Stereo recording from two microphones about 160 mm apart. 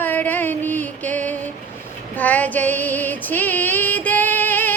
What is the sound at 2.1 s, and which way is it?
Female singing, 10° left (ahead or behind).